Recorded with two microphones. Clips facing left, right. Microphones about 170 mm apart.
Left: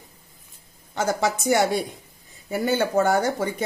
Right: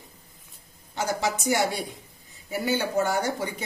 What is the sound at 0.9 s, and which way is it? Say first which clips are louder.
Speech: left 4 dB; 50° left (ahead or behind).